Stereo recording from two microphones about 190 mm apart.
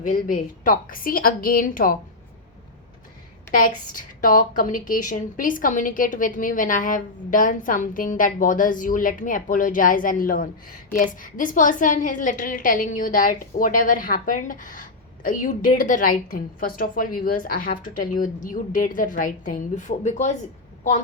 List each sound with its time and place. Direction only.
0.0 s a woman's voice: 45° left (ahead or behind)
3.5 s a woman's voice: 45° left (ahead or behind)